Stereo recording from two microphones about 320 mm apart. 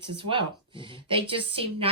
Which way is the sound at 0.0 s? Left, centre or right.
Centre.